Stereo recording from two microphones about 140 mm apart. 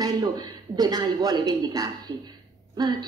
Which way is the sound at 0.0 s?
30° right (ahead or behind).